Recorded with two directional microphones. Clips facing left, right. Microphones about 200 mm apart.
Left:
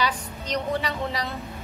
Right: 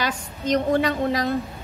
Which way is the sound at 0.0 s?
50° right (ahead or behind).